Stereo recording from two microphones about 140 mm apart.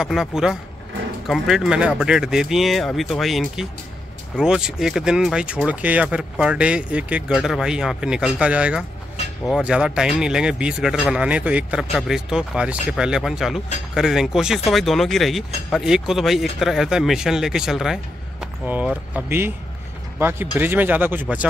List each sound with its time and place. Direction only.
0.0 s speech: centre (ahead or behind)
19.1 s speech: 15° right (ahead or behind)